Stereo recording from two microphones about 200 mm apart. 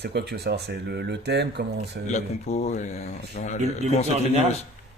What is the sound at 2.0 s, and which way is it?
Speech, 35° left (ahead or behind).